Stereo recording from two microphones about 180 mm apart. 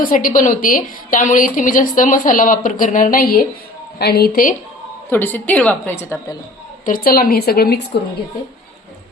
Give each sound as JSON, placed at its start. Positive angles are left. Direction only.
{"t": 0.0, "sound": "a woman's voice", "side_deg": 50}
{"t": 5.0, "sound": "a woman's voice", "side_deg": 10}
{"t": 6.8, "sound": "speech", "side_deg": 55}